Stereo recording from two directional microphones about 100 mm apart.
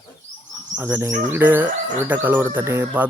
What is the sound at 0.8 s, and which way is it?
Speech, 20° right (ahead or behind).